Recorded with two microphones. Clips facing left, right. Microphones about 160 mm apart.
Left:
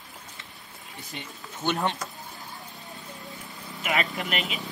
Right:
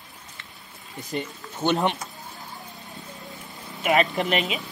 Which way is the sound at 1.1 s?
45° right (ahead or behind).